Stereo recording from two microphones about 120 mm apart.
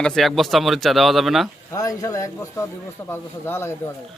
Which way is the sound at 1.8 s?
30° left (ahead or behind).